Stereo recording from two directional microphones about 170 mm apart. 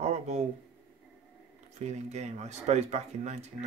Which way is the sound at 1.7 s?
40° right (ahead or behind).